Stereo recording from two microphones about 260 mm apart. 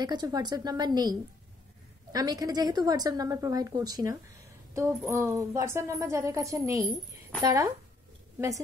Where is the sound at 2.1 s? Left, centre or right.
Centre.